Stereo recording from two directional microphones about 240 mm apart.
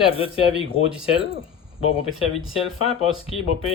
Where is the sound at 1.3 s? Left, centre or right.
Left.